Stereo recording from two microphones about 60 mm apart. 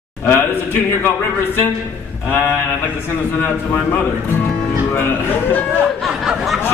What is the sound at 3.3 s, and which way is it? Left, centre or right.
Speech, left.